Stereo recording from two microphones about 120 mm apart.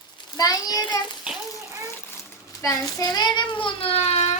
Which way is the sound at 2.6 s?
30° left (ahead or behind).